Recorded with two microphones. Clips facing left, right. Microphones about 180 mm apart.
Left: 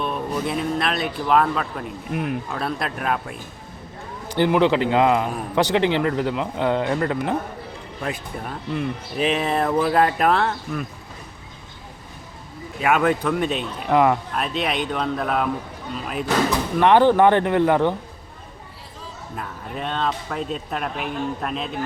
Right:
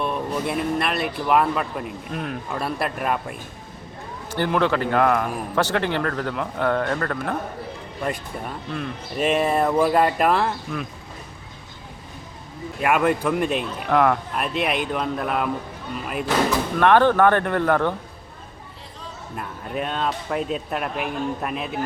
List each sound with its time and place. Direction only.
0.0 s speech: centre (ahead or behind)
2.1 s a man's voice: 10° left (ahead or behind)
2.5 s speech: 5° right (ahead or behind)
4.3 s a man's voice: 15° left (ahead or behind)
8.0 s speech: centre (ahead or behind)
12.8 s speech: centre (ahead or behind)
13.9 s a man's voice: 10° left (ahead or behind)
14.3 s speech: 5° right (ahead or behind)
16.8 s a man's voice: 15° left (ahead or behind)
19.4 s speech: 5° right (ahead or behind)